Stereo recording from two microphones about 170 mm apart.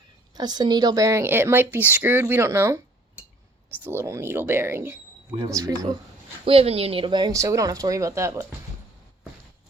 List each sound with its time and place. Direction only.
0.3 s speech: 25° right (ahead or behind)
3.8 s speech: 15° right (ahead or behind)
6.4 s speech: 35° right (ahead or behind); by 8.4 s 15° right (ahead or behind)